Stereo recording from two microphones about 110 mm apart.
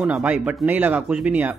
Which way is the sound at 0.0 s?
15° right (ahead or behind).